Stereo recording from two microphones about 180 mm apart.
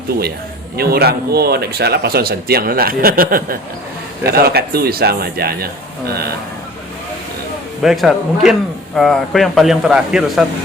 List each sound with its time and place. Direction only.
0.8 s speech: 60° right (ahead or behind)
7.8 s speech: centre (ahead or behind)